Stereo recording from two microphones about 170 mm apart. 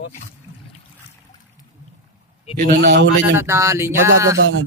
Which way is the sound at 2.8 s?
90° right.